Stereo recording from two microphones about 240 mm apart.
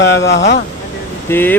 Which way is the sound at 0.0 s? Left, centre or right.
Left.